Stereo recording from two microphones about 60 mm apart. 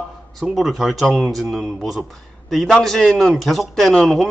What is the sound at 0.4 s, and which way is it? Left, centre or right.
A man's voice, centre.